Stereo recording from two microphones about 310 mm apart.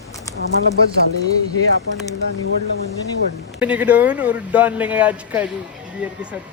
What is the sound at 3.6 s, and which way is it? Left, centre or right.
Speech, centre.